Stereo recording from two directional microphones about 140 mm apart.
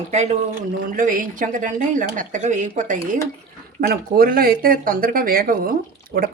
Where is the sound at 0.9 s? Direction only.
75° right (ahead or behind).